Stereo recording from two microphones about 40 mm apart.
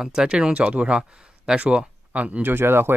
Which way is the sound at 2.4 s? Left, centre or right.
Right.